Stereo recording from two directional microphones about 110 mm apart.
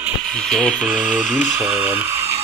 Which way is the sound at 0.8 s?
10° right (ahead or behind).